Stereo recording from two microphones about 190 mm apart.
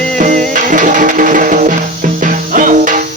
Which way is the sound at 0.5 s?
45° right (ahead or behind).